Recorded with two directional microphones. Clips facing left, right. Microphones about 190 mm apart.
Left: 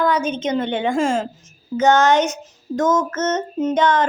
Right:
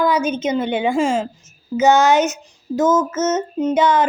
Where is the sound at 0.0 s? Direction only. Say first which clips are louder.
Right 2 dB; 10° right (ahead or behind).